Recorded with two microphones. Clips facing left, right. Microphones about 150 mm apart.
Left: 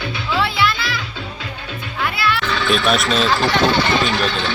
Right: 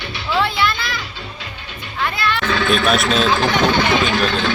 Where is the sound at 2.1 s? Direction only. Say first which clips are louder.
Right 1 dB; 5° left (ahead or behind).